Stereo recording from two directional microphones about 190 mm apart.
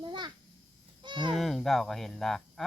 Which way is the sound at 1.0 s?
25° right (ahead or behind).